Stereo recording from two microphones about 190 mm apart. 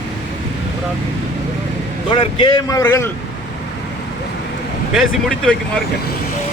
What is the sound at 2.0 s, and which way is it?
Speech, 25° left (ahead or behind).